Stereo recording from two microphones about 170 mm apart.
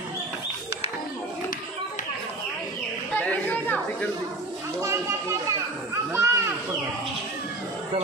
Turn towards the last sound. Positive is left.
turn(degrees=-15)  # may be behind; listen again after turning